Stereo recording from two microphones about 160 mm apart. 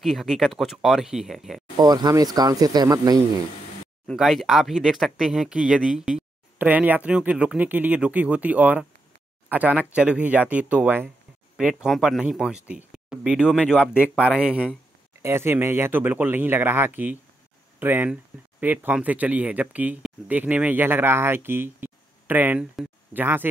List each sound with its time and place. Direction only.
0.0 s speech: centre (ahead or behind)
1.8 s speech: 25° right (ahead or behind)
4.1 s speech: centre (ahead or behind)